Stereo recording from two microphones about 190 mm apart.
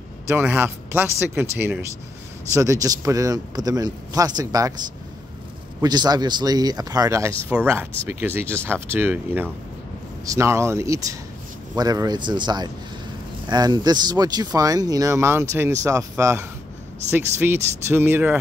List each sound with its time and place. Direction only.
0.3 s a man's voice: 10° right (ahead or behind)